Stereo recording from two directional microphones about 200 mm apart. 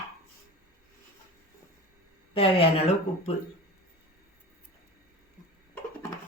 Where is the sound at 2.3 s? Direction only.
30° left (ahead or behind).